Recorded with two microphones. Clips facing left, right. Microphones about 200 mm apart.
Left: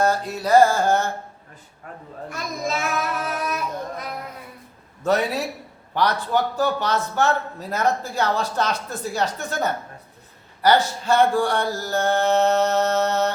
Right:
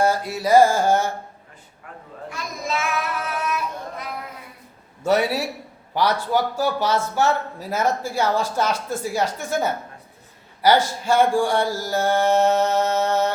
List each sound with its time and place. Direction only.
0.0 s a man's voice: 10° right (ahead or behind)
2.3 s child singing: 40° left (ahead or behind)
5.0 s a man's voice: 10° right (ahead or behind)